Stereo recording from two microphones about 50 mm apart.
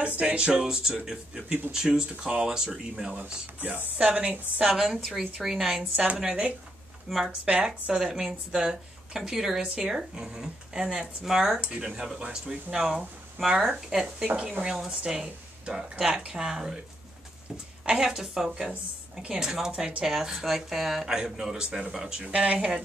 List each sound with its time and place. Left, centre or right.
0.0 s speech: right
0.5 s speech: centre
3.2 s speech: right
4.6 s speech: centre
7.1 s speech: centre
7.8 s speech: centre
14.2 s speech: right
17.8 s speech: centre
22.3 s speech: right